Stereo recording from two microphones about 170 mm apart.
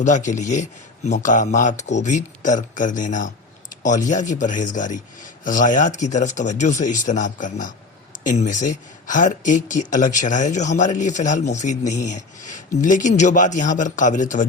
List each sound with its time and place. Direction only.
0.3 s speech: 45° left (ahead or behind)